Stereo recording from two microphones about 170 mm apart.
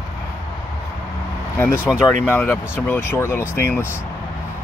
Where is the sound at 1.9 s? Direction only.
10° left (ahead or behind).